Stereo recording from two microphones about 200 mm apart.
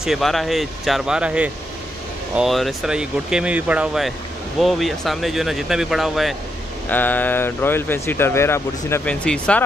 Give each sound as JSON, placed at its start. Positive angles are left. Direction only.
{"t": 0.0, "sound": "speech", "side_deg": 0}